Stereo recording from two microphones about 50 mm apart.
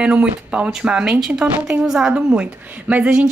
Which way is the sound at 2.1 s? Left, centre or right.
Right.